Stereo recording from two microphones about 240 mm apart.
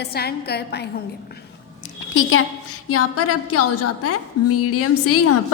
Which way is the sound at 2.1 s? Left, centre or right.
Left.